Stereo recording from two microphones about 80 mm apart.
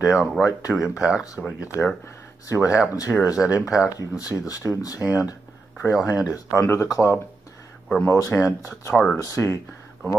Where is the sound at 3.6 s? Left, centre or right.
Centre.